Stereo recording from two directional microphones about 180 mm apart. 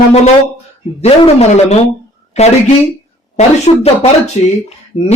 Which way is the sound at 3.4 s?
35° left (ahead or behind).